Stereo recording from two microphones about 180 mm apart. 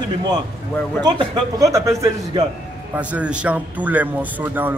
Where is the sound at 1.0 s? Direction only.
20° right (ahead or behind).